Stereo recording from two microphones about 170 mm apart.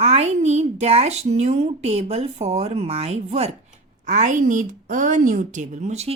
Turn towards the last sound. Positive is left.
turn(degrees=-40)  # may be behind; listen again after turning